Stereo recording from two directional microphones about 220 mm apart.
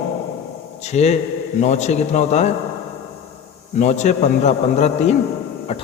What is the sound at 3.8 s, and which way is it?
A man's voice, 30° left (ahead or behind).